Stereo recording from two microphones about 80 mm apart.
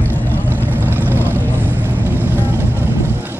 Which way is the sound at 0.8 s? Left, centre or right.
Right.